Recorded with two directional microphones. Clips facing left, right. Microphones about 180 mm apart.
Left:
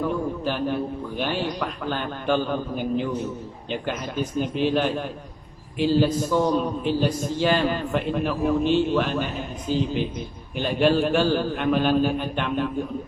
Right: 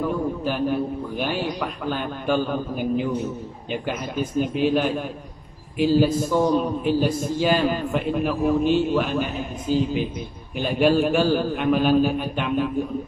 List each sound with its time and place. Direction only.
0.0 s a man's voice: 10° right (ahead or behind)
5.9 s a man's voice: 10° right (ahead or behind)
9.7 s speech: 45° right (ahead or behind)
10.6 s a man's voice: 10° right (ahead or behind)